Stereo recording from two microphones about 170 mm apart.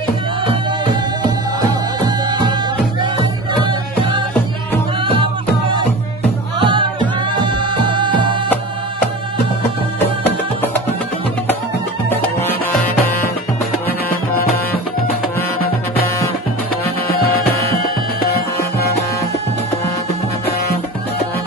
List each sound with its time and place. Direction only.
1.2 s music: 25° right (ahead or behind)
6.6 s music: 30° right (ahead or behind)
12.1 s music: 10° left (ahead or behind)